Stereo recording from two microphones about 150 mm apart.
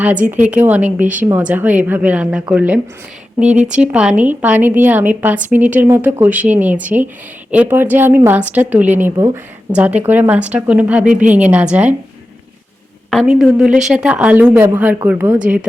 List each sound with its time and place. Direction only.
0.3 s a woman's voice: 10° right (ahead or behind)
13.1 s a woman's voice: centre (ahead or behind)